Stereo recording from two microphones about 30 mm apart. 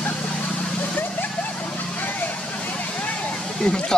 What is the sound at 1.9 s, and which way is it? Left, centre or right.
Vehicle, left.